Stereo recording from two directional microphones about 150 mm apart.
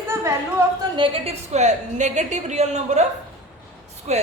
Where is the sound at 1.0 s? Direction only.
40° right (ahead or behind).